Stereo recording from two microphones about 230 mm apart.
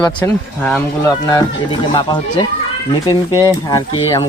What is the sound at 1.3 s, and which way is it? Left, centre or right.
Speech, centre.